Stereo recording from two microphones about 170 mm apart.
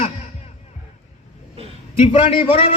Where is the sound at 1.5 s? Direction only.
35° right (ahead or behind).